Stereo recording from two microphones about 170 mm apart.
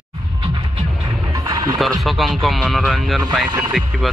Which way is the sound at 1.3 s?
20° right (ahead or behind).